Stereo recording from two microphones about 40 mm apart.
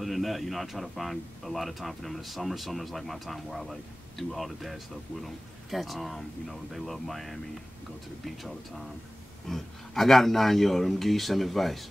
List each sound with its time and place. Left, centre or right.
0.0 s speech: centre
8.4 s speech: centre